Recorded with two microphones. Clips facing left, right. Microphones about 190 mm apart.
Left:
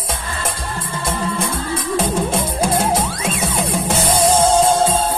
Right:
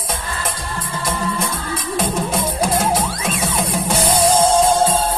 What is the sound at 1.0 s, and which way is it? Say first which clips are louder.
Music: left 1 dB; 25° left (ahead or behind).